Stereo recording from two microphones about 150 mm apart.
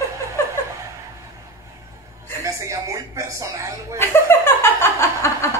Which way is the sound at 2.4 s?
20° right (ahead or behind).